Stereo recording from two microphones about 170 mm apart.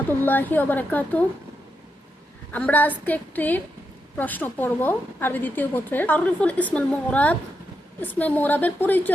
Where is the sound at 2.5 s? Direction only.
10° left (ahead or behind).